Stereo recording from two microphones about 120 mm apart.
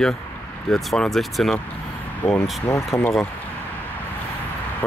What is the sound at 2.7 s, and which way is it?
Speech, 25° left (ahead or behind).